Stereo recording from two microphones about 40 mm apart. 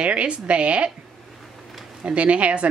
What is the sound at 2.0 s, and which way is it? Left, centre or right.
Speech, right.